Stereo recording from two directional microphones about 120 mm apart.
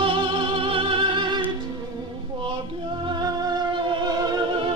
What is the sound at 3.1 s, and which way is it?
Music, 35° right (ahead or behind).